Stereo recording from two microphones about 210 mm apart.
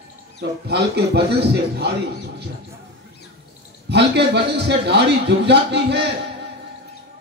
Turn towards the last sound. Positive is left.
turn(degrees=-55)  # may be behind; listen again after turning